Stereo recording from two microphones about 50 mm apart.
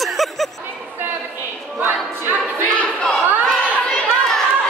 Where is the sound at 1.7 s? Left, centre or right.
Right.